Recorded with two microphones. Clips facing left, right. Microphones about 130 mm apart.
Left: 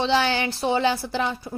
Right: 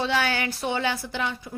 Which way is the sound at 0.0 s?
30° left (ahead or behind).